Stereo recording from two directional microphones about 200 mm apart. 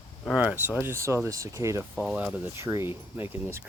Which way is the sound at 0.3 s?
5° right (ahead or behind).